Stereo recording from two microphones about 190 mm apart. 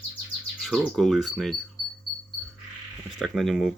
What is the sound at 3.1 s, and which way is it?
Speech, centre (ahead or behind).